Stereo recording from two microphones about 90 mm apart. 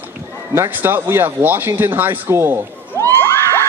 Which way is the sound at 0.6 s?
25° right (ahead or behind).